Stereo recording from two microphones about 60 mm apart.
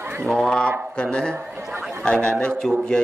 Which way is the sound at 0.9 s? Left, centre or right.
Centre.